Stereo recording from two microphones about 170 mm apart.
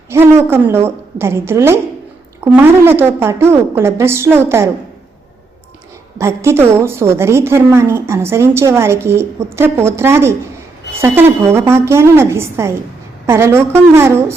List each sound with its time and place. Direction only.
0.1 s a woman's voice: 15° right (ahead or behind)
6.1 s a woman's voice: 15° right (ahead or behind)